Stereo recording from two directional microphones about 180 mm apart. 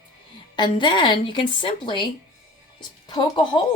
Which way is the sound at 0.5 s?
25° left (ahead or behind).